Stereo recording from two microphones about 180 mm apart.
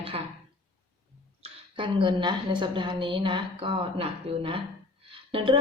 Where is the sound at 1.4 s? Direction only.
30° right (ahead or behind).